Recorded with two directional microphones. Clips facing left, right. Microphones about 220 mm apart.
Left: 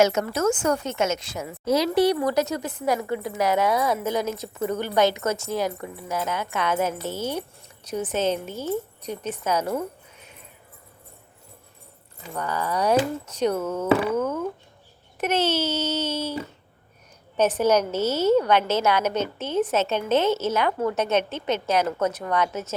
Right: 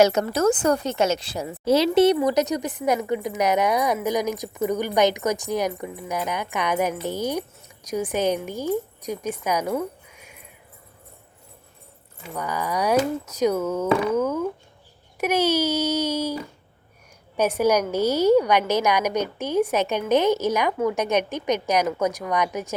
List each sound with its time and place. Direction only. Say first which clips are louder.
0.0 s a woman's voice: right 2 dB; 35° right (ahead or behind); by 10.4 s 10° right (ahead or behind)
12.3 s a woman's voice: even; 10° right (ahead or behind)